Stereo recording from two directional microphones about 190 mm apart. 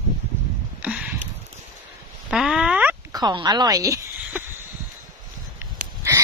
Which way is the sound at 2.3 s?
5° right (ahead or behind).